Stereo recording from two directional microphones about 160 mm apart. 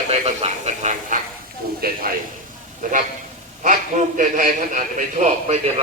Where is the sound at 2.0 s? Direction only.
65° right (ahead or behind); by 5.8 s 45° right (ahead or behind).